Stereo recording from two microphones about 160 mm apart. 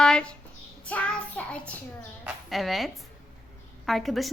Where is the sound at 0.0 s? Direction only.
5° left (ahead or behind).